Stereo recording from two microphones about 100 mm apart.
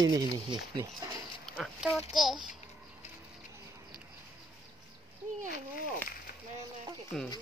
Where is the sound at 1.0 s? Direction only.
45° right (ahead or behind).